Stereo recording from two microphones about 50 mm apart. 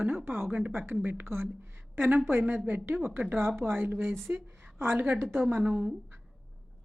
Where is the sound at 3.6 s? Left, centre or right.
Right.